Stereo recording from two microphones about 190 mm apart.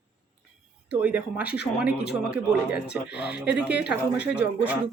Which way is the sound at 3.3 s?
5° right (ahead or behind).